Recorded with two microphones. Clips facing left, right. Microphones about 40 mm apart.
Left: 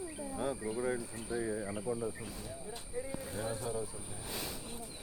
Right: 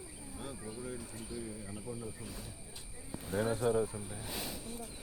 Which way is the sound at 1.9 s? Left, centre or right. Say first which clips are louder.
Left 7 dB; left.